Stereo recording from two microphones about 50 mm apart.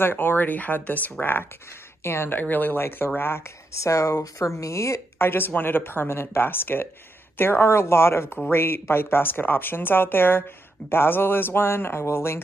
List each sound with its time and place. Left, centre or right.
0.0 s speech: left
2.3 s speech: left
3.7 s speech: left
5.2 s speech: left